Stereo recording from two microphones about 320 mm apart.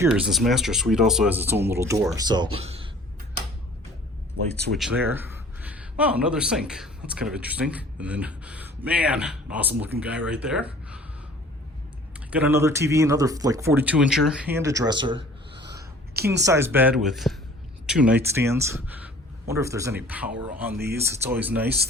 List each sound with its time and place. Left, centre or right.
0.0 s speech: centre
4.7 s a man's voice: centre
12.3 s speech: centre
16.1 s speech: right
16.5 s speech: centre